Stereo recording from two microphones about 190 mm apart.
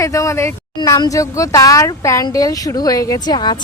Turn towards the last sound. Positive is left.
turn(degrees=20)  # may be behind; listen again after turning